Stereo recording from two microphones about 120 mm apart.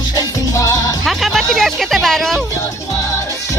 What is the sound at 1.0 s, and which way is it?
Music, centre (ahead or behind).